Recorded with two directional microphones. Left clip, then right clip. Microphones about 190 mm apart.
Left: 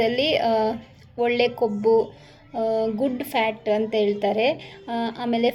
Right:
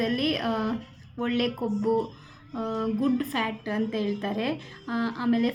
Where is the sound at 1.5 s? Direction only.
50° left (ahead or behind).